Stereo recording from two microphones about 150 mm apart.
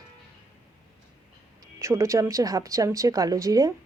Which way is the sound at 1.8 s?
20° right (ahead or behind).